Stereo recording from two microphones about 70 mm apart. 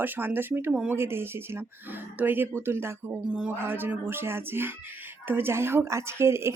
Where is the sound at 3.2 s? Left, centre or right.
Centre.